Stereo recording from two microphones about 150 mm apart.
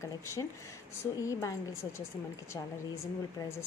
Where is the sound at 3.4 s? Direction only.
15° left (ahead or behind).